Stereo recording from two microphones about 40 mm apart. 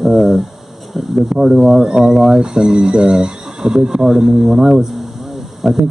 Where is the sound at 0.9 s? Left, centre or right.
Centre.